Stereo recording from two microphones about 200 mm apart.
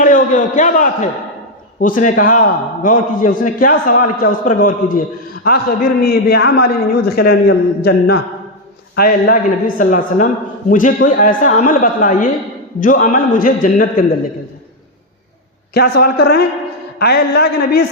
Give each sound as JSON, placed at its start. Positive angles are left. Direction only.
{"t": 0.0, "sound": "a man's voice", "side_deg": 40}
{"t": 15.7, "sound": "a man's voice", "side_deg": 50}